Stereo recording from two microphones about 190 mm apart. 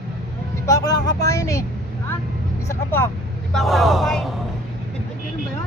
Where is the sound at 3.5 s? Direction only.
Centre (ahead or behind).